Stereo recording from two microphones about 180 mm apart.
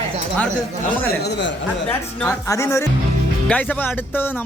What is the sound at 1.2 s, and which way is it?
Speech, 75° left (ahead or behind).